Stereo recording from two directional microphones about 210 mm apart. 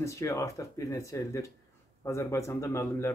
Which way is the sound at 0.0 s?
15° left (ahead or behind).